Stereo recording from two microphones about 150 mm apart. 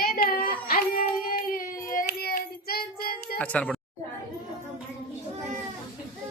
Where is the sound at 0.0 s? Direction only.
80° left.